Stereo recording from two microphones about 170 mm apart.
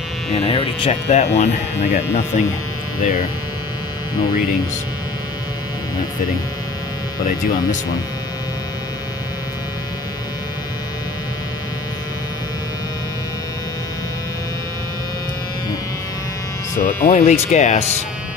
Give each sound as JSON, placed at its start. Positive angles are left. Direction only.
{"t": 0.3, "sound": "speech", "side_deg": 35}
{"t": 3.0, "sound": "speech", "side_deg": 55}
{"t": 7.2, "sound": "speech", "side_deg": 55}
{"t": 16.7, "sound": "speech", "side_deg": 50}